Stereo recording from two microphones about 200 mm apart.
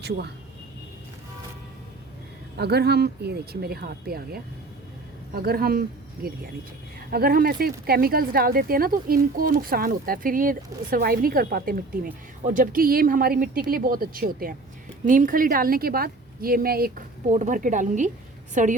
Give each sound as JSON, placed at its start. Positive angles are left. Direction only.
{"t": 0.0, "sound": "speech", "side_deg": -55}
{"t": 2.6, "sound": "speech", "side_deg": -55}
{"t": 7.1, "sound": "a woman's voice", "side_deg": -50}